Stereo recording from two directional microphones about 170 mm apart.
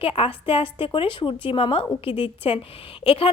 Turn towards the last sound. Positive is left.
turn(degrees=30)  # may be behind; listen again after turning